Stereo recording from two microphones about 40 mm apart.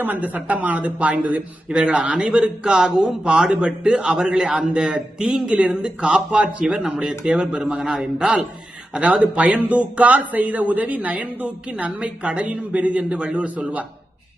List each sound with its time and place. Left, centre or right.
0.0 s speech: right
1.7 s a man's voice: right
4.7 s a man's voice: right
7.8 s a man's voice: centre
8.9 s a man's voice: right